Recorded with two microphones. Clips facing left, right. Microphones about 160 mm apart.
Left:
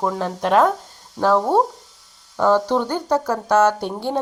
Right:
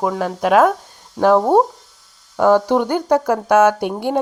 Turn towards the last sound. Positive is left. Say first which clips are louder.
# right 3 dB
turn(degrees=-15)  # may be behind; listen again after turning